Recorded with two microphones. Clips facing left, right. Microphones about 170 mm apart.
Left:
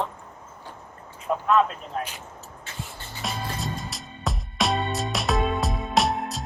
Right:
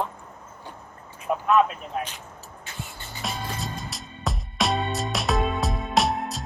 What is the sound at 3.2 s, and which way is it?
Music, centre (ahead or behind).